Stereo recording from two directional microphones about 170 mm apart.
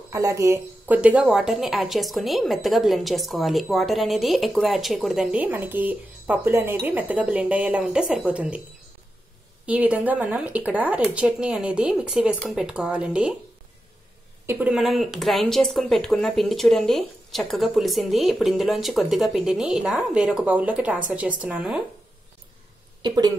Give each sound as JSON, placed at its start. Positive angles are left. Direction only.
{"t": 0.1, "sound": "a woman's voice", "side_deg": -15}
{"t": 9.7, "sound": "a woman's voice", "side_deg": -10}
{"t": 14.4, "sound": "a sound", "side_deg": -15}
{"t": 14.7, "sound": "a woman's voice", "side_deg": 0}
{"t": 23.0, "sound": "speech", "side_deg": -20}